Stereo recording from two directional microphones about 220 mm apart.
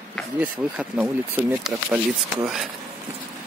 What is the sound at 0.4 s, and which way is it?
Speech, 5° right (ahead or behind).